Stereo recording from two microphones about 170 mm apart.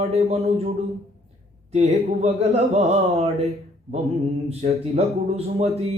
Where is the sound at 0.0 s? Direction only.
40° right (ahead or behind).